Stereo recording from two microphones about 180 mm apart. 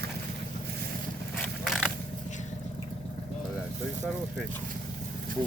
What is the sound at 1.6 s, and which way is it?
Mechanisms, centre (ahead or behind).